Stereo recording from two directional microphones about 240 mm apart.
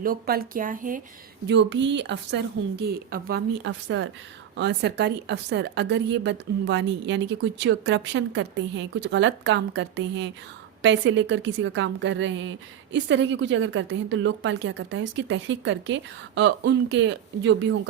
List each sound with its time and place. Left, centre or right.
0.0 s speech: right
1.5 s a woman's voice: right
3.6 s a woman's voice: right